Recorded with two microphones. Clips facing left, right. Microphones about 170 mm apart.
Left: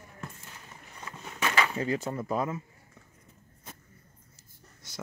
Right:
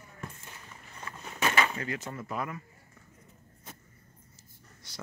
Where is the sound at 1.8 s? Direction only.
35° left (ahead or behind).